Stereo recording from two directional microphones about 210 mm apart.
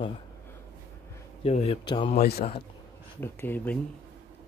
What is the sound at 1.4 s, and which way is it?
Speech, 30° left (ahead or behind).